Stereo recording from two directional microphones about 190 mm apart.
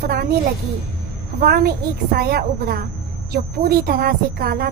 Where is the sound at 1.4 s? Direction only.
55° right (ahead or behind).